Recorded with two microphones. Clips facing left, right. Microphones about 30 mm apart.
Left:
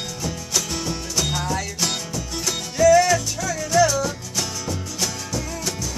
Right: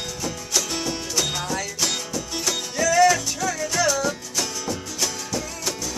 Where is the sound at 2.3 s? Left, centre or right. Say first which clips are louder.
Right 1 dB; centre.